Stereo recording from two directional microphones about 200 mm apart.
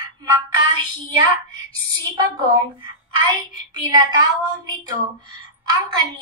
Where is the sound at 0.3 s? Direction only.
20° right (ahead or behind).